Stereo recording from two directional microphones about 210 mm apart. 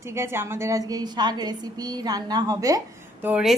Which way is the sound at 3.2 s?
5° right (ahead or behind).